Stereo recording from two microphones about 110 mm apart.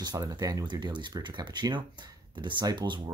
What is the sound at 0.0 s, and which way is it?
Speech, 35° right (ahead or behind).